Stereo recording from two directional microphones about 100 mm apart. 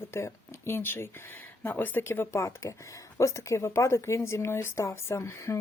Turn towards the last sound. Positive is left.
turn(degrees=30)  # may be behind; listen again after turning